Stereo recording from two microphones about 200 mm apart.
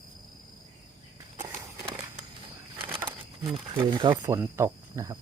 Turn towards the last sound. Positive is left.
turn(degrees=-15)  # may be behind; listen again after turning